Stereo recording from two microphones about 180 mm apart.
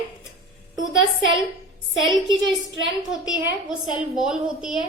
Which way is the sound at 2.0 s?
25° right (ahead or behind).